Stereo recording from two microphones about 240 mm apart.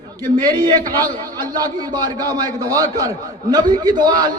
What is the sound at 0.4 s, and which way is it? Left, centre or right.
Speech, centre.